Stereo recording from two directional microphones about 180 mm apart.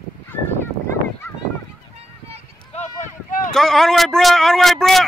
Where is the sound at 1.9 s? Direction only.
35° right (ahead or behind).